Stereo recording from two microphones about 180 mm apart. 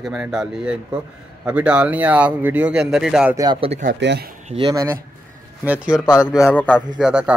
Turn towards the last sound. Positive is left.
turn(degrees=-5)  # may be behind; listen again after turning